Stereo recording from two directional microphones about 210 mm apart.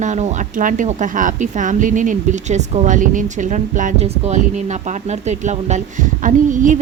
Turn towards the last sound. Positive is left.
turn(degrees=-35)  # may be behind; listen again after turning